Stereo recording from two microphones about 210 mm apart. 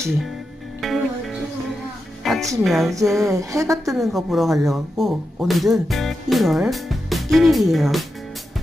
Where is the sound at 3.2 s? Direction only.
15° right (ahead or behind).